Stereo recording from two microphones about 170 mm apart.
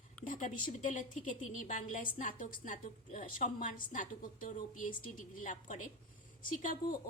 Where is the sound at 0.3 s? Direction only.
50° left (ahead or behind).